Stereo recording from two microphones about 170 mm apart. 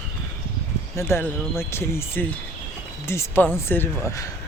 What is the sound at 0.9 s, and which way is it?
Speech, 15° left (ahead or behind).